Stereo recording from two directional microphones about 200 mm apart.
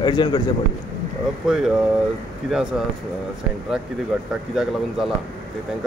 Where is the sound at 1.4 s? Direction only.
5° right (ahead or behind).